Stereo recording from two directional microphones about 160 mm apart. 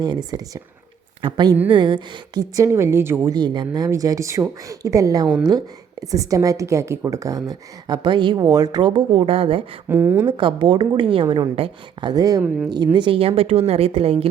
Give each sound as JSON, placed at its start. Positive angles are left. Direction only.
{"t": 1.2, "sound": "a woman's voice", "side_deg": -30}
{"t": 3.3, "sound": "a woman's voice", "side_deg": -30}
{"t": 9.9, "sound": "a woman's voice", "side_deg": -15}
{"t": 10.2, "sound": "a woman's voice", "side_deg": -30}
{"t": 12.4, "sound": "a woman's voice", "side_deg": -5}
{"t": 12.7, "sound": "a woman's voice", "side_deg": -25}